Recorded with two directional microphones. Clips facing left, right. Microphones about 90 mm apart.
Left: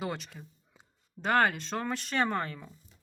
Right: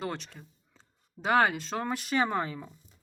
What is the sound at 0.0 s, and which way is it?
Speech, 5° left (ahead or behind).